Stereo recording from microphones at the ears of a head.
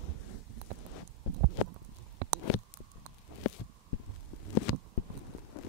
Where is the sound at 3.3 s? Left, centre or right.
Left.